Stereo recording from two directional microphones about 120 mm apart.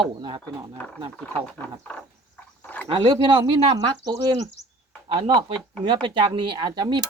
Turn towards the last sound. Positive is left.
turn(degrees=-35)  # may be behind; listen again after turning